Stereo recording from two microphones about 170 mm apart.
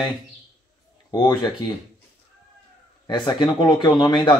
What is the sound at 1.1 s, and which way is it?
Speech, 25° left (ahead or behind).